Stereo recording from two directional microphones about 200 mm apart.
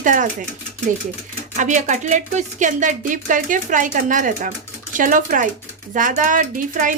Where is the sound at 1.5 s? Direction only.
35° right (ahead or behind).